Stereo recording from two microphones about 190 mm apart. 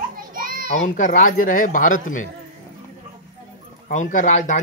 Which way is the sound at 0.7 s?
40° left (ahead or behind).